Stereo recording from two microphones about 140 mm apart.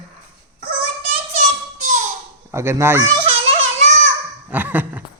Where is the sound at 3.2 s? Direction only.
45° right (ahead or behind).